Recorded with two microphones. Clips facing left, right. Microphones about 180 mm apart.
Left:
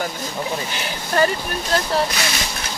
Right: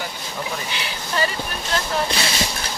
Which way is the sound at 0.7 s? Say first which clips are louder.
Left 6 dB; 50° left (ahead or behind).